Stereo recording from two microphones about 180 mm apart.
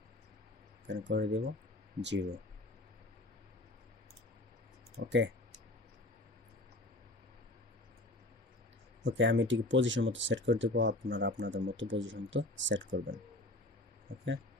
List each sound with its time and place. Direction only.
0.9 s speech: 75° right (ahead or behind)
5.0 s speech: 80° right
9.0 s speech: 90° right